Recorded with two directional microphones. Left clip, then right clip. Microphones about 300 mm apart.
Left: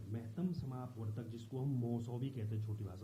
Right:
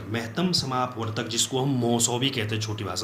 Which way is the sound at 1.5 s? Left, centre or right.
Right.